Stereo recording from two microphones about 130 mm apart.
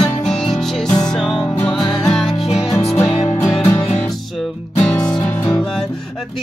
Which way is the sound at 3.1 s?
45° left (ahead or behind).